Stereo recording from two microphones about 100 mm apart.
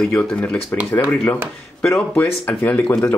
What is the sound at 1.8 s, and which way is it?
Speech, 10° left (ahead or behind).